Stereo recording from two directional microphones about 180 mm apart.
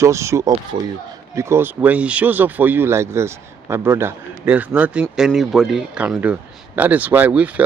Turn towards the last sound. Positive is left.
turn(degrees=-10)  # may be behind; listen again after turning